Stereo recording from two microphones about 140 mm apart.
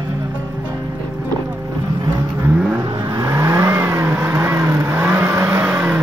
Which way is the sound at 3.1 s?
20° right (ahead or behind).